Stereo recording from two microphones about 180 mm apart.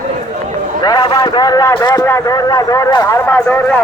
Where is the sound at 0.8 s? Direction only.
25° left (ahead or behind).